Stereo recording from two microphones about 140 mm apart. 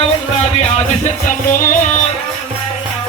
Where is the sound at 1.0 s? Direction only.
70° left (ahead or behind).